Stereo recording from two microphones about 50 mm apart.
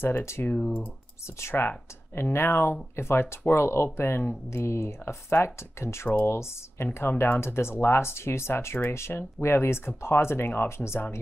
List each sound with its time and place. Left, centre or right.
0.0 s speech: left
0.6 s speech: left
1.5 s speech: left
2.3 s speech: left
4.5 s speech: left